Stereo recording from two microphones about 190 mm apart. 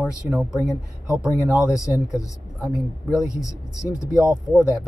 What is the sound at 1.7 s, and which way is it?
Speech, 15° left (ahead or behind).